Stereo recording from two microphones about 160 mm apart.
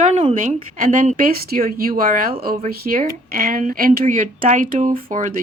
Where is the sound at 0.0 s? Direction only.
45° right (ahead or behind).